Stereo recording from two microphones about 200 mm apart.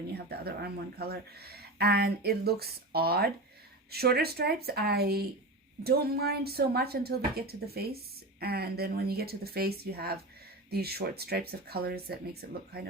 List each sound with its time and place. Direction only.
0.1 s a woman's voice: 55° right (ahead or behind)